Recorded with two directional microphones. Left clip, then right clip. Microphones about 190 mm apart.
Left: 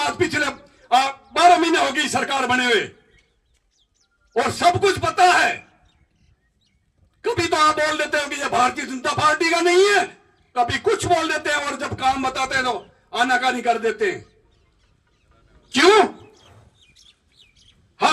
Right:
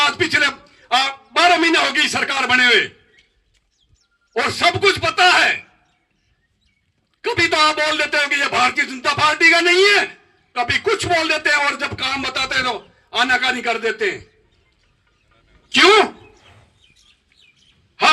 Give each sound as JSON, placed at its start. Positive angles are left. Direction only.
{"t": 0.0, "sound": "a man's voice", "side_deg": 40}
{"t": 4.4, "sound": "a man's voice", "side_deg": 40}
{"t": 7.2, "sound": "a man's voice", "side_deg": 40}
{"t": 15.7, "sound": "speech", "side_deg": 45}
{"t": 16.4, "sound": "chicken", "side_deg": 10}